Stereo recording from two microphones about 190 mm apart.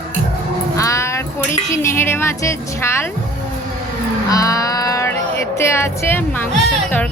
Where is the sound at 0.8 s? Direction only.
15° left (ahead or behind).